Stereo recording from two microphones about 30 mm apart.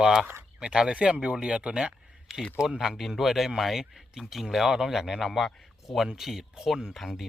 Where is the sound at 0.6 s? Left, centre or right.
Right.